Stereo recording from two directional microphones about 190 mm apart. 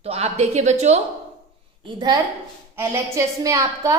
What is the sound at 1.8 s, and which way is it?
A woman's voice, 25° right (ahead or behind).